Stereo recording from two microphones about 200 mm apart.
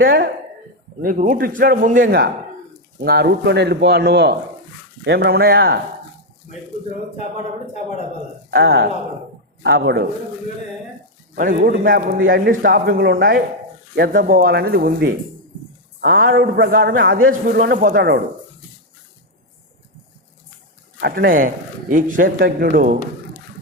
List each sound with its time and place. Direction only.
0.0 s speech: 45° right (ahead or behind)
8.4 s speech: 50° right (ahead or behind)
11.3 s speech: 45° right (ahead or behind)
17.0 s a man's voice: 80° right
17.4 s speech: 50° right (ahead or behind)
21.0 s speech: 45° right (ahead or behind)